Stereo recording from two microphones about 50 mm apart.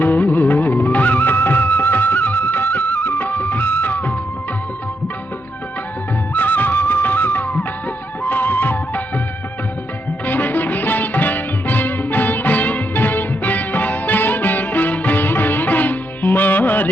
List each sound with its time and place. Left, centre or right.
0.0 s music: left
6.3 s music: left
10.2 s music: left